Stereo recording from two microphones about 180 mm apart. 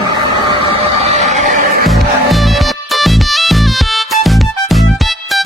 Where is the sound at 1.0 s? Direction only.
40° right (ahead or behind).